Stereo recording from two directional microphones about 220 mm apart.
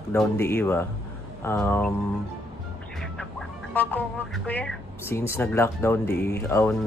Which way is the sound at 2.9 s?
Centre (ahead or behind).